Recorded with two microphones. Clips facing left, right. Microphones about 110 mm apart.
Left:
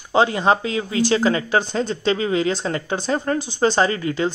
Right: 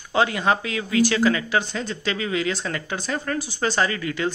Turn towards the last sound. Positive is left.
turn(degrees=30)  # may be behind; listen again after turning